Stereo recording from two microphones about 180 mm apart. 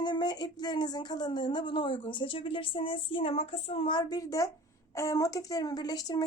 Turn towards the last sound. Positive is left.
turn(degrees=20)  # may be behind; listen again after turning